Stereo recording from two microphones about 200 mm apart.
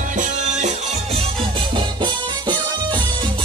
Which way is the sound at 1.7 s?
25° right (ahead or behind).